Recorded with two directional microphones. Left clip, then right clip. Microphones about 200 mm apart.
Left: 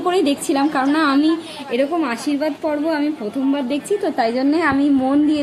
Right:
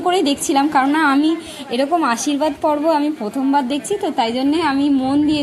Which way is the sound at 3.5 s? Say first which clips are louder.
Right 4 dB; 20° right (ahead or behind).